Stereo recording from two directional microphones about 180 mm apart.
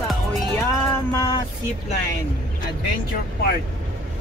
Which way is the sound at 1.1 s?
20° left (ahead or behind).